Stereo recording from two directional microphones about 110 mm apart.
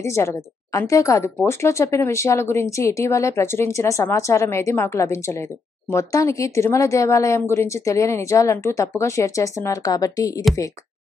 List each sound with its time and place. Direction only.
0.0 s speech: 25° left (ahead or behind)